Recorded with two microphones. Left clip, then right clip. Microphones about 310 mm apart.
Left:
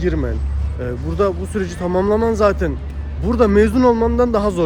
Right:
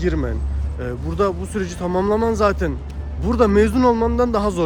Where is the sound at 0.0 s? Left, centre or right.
Centre.